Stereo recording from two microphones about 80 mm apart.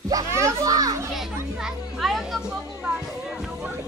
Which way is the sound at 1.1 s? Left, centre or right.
Centre.